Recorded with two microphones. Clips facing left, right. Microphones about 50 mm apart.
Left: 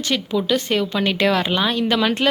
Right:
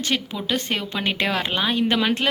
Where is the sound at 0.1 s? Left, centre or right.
Right.